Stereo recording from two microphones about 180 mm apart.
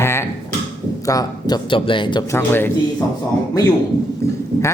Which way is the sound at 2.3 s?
10° left (ahead or behind).